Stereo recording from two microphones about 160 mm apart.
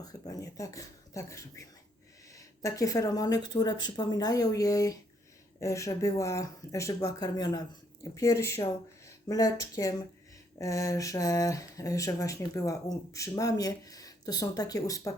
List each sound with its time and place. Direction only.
0.0 s speech: 20° left (ahead or behind)